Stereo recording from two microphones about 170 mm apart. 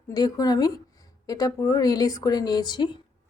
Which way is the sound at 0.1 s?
20° left (ahead or behind).